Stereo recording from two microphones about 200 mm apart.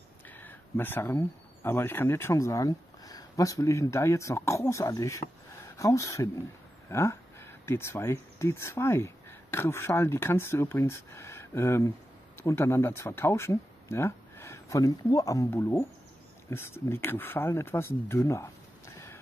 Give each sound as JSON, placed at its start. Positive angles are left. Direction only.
{"t": 0.4, "sound": "speech", "side_deg": 10}